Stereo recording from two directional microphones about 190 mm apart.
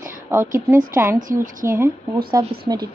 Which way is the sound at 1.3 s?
45° right (ahead or behind).